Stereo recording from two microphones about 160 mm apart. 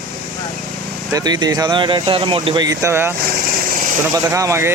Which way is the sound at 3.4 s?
65° right (ahead or behind).